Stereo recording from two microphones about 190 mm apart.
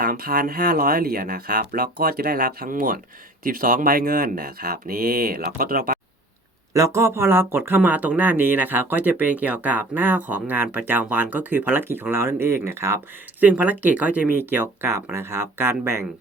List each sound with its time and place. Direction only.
0.0 s speech: 50° right (ahead or behind)
6.7 s speech: 15° right (ahead or behind)